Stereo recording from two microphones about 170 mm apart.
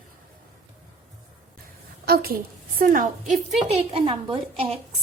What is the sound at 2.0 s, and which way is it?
A woman's voice, 60° right (ahead or behind).